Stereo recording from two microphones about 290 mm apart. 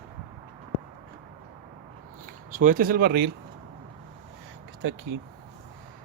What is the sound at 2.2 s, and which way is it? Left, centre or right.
Speech, right.